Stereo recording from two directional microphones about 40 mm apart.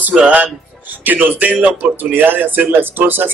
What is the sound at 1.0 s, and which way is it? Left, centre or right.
Speech, right.